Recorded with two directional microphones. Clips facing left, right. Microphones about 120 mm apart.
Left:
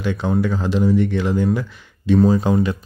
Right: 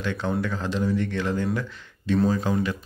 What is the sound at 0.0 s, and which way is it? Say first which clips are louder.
A man's voice: left 6 dB; 15° left (ahead or behind).